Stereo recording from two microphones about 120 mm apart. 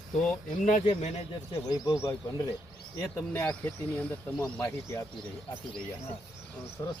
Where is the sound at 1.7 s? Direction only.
30° left (ahead or behind).